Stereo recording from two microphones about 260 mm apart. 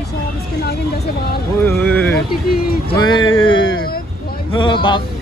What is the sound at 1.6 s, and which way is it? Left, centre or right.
Speech, centre.